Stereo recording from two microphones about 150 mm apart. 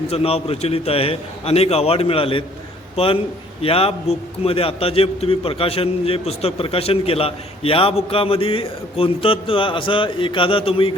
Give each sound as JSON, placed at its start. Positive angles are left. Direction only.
{"t": 0.1, "sound": "a man's voice", "side_deg": 40}